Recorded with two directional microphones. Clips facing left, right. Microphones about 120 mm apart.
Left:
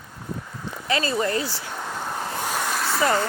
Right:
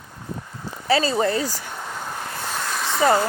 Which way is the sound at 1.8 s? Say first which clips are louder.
Left 2 dB; 10° left (ahead or behind).